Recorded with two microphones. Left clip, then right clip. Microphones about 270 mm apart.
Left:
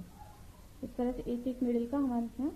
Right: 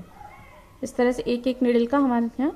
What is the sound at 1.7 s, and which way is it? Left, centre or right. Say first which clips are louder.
Speech: right 13 dB; right.